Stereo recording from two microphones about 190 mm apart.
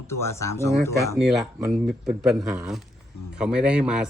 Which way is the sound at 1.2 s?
Centre (ahead or behind).